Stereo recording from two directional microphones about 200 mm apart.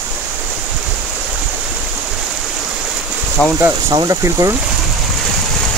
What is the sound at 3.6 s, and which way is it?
Speech, 15° right (ahead or behind).